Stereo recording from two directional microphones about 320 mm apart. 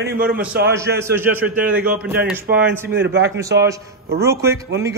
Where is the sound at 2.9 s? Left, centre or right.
Right.